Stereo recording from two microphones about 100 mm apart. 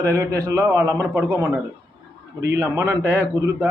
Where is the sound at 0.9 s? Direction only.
20° right (ahead or behind).